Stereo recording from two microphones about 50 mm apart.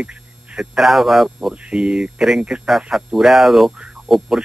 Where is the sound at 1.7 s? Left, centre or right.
Centre.